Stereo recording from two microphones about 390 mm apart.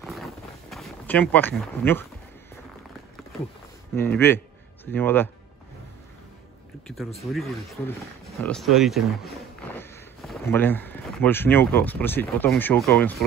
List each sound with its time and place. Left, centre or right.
0.0 s a sound: centre
4.2 s speech: centre
7.2 s speech: centre